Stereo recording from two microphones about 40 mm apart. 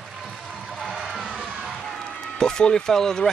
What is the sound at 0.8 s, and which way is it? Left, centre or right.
Music, centre.